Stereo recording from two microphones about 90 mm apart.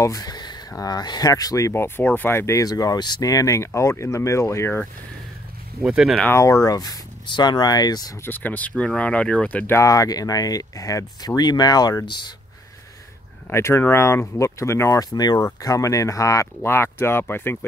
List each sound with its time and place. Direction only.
0.0 s a sound: 45° left (ahead or behind)
0.7 s speech: 45° left (ahead or behind)
1.7 s speech: 30° left (ahead or behind)
5.8 s speech: 5° right (ahead or behind)
6.3 s speech: 35° left (ahead or behind)
7.2 s speech: 55° left (ahead or behind)
8.2 s speech: 20° left (ahead or behind)
9.7 s speech: 35° left (ahead or behind)
13.5 s speech: 30° left (ahead or behind)
15.0 s speech: 45° left (ahead or behind)
15.3 s speech: 35° left (ahead or behind)